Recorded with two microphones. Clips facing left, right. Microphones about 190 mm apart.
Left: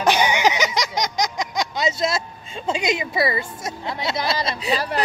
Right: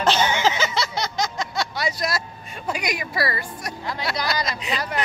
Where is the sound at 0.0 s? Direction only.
15° left (ahead or behind).